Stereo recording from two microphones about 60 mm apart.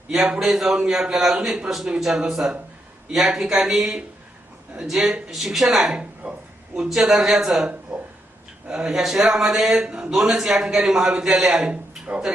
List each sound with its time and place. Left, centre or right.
0.1 s a man's voice: centre
7.7 s speech: centre